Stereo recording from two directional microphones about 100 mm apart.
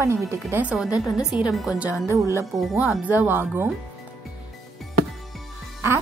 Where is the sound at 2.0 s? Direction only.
30° right (ahead or behind).